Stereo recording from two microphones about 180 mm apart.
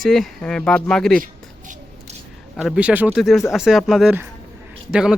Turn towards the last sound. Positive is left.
turn(degrees=-5)  # may be behind; listen again after turning